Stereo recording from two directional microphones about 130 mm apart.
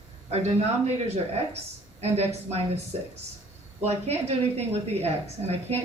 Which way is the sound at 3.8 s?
55° right (ahead or behind).